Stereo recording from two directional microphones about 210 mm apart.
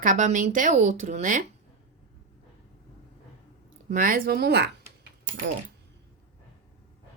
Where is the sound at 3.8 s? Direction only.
40° right (ahead or behind).